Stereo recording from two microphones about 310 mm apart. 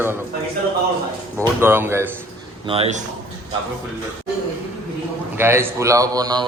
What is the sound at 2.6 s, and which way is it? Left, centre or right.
Speech, centre.